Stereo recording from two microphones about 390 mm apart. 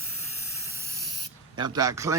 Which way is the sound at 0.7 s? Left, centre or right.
Centre.